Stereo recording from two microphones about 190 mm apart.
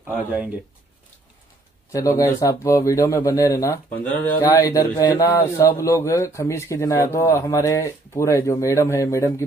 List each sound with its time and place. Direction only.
1.9 s speech: 15° left (ahead or behind)